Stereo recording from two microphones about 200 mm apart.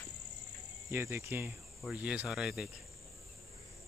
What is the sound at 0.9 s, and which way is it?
Cricket, 10° right (ahead or behind).